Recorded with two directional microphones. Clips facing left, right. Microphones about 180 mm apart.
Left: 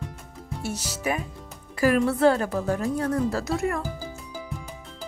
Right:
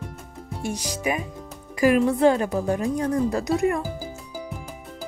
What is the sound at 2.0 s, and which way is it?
Speech, 15° right (ahead or behind).